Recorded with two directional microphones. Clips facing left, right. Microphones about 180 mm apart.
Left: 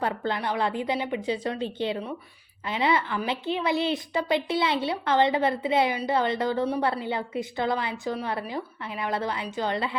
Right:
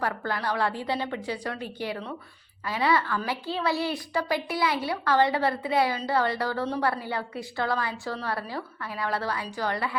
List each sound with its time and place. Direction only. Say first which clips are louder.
0.0 s a woman's voice: left 2 dB; 20° left (ahead or behind)